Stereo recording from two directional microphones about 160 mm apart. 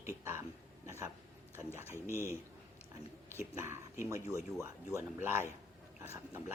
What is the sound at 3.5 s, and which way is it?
Speech, 15° right (ahead or behind).